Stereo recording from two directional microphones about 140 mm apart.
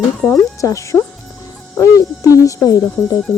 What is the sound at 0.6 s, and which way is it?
Speech, 20° left (ahead or behind).